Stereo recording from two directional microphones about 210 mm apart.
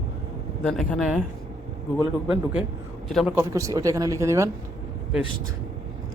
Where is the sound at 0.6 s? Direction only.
5° left (ahead or behind).